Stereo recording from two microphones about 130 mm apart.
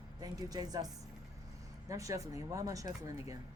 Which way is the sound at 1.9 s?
25° right (ahead or behind).